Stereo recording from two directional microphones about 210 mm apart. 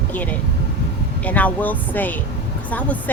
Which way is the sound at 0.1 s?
5° left (ahead or behind).